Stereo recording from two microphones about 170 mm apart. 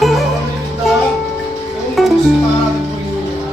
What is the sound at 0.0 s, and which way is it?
Music, centre (ahead or behind).